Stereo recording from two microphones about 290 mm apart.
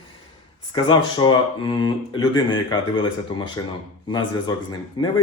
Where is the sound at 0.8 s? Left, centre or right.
Centre.